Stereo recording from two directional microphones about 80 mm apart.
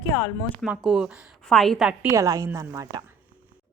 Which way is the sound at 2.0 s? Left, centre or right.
Right.